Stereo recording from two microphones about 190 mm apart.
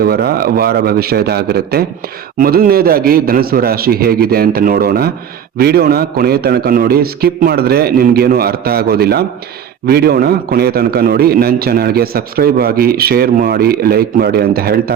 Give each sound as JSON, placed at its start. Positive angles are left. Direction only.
{"t": 0.0, "sound": "a man's voice", "side_deg": -55}